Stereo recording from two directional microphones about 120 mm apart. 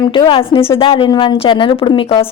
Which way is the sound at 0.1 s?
45° left (ahead or behind).